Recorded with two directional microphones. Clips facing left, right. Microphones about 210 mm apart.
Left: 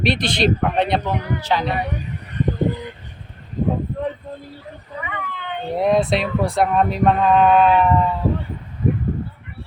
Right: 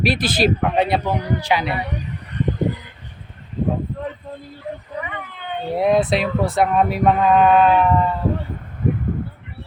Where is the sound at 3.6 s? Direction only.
40° left (ahead or behind).